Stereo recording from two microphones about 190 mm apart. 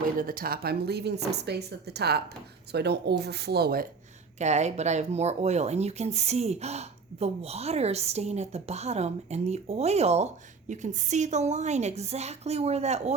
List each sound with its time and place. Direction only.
0.2 s speech: 50° right (ahead or behind)
4.4 s speech: 35° right (ahead or behind)